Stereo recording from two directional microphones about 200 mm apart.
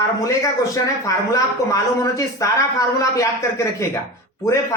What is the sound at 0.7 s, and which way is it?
Speech, 15° left (ahead or behind).